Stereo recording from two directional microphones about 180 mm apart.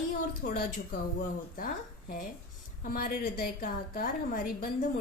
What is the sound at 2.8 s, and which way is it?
A woman's voice, 50° left (ahead or behind).